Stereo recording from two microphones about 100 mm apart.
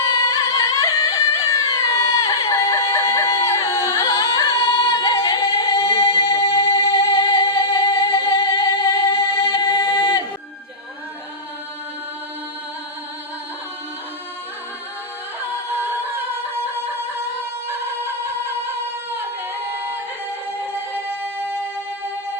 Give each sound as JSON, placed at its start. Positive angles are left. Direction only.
{"t": 0.0, "sound": "music", "side_deg": 30}
{"t": 5.1, "sound": "singing", "side_deg": 30}
{"t": 6.1, "sound": "music", "side_deg": 30}
{"t": 8.6, "sound": "singing", "side_deg": 35}